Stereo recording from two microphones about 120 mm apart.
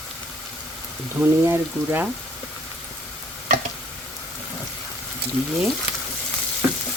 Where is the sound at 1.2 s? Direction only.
20° right (ahead or behind).